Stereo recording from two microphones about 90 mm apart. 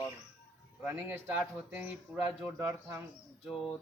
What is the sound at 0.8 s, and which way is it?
Speech, 25° right (ahead or behind).